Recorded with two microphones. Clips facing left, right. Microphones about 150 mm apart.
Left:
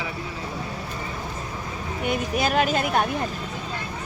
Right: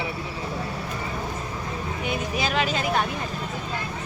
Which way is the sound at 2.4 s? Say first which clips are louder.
Left 4 dB; 50° left (ahead or behind).